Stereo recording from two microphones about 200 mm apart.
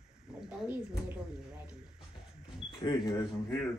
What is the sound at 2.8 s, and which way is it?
Speech, 20° left (ahead or behind).